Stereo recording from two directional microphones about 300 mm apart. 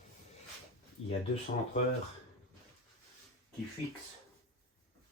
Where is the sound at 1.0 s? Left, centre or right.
Left.